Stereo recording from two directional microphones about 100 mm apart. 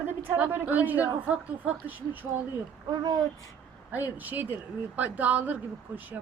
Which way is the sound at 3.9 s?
15° right (ahead or behind).